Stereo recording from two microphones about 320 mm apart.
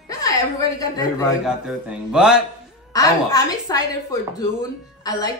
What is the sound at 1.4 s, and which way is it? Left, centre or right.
Speech, centre.